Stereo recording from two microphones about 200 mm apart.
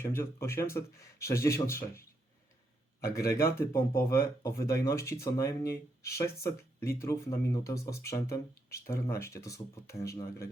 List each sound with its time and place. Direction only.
0.0 s speech: 10° left (ahead or behind)
3.0 s speech: 15° left (ahead or behind)